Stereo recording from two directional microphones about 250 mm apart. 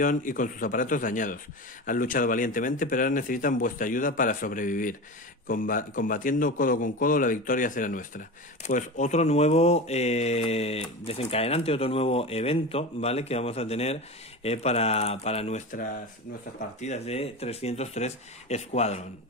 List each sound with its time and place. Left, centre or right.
0.0 s speech: left